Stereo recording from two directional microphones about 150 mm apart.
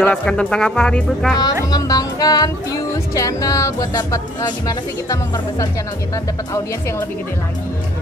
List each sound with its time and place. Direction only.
0.0 s speech: 5° left (ahead or behind)
1.4 s speech: 25° left (ahead or behind)